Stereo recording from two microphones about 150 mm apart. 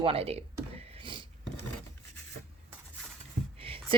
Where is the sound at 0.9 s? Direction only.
35° right (ahead or behind).